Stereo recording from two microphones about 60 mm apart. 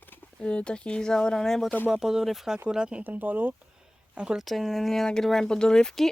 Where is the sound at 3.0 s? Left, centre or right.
Right.